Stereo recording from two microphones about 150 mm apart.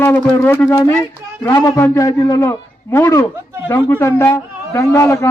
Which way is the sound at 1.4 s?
25° left (ahead or behind).